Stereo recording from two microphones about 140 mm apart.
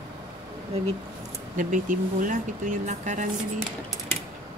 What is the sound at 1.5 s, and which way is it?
Speech, 70° right (ahead or behind).